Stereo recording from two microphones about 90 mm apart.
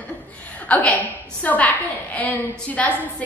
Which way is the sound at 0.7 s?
15° left (ahead or behind).